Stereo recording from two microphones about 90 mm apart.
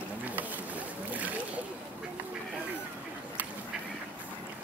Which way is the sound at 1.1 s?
20° right (ahead or behind).